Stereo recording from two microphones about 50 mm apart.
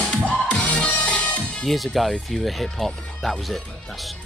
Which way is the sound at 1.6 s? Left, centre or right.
Centre.